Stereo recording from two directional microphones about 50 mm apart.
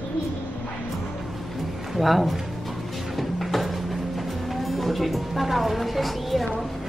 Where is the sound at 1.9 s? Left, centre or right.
Centre.